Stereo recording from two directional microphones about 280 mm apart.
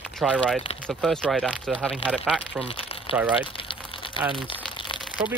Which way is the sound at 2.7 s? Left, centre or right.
Centre.